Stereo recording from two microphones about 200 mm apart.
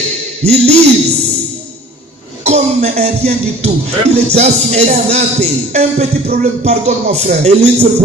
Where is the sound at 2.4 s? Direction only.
35° right (ahead or behind).